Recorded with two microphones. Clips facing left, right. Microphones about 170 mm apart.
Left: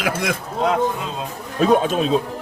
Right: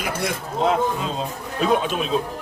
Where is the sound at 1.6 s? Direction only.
40° left (ahead or behind).